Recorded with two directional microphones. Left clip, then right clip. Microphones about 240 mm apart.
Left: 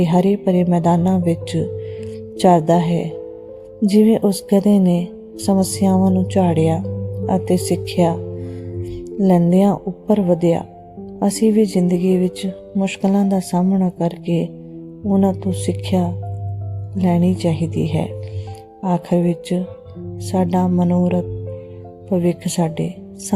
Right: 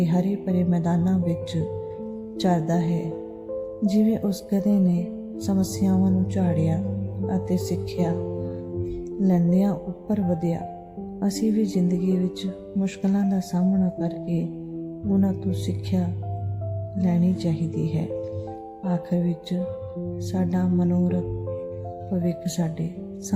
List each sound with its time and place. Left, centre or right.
0.0 s speech: left
9.2 s speech: left
22.2 s speech: left